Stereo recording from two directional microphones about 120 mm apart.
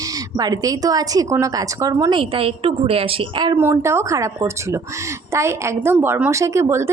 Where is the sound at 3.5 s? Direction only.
20° right (ahead or behind).